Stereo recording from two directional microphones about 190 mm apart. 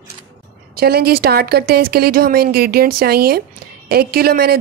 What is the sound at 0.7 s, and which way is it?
Speech, 55° right (ahead or behind).